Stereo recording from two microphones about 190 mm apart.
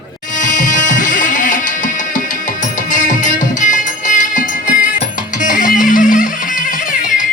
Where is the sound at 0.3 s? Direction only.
40° left (ahead or behind).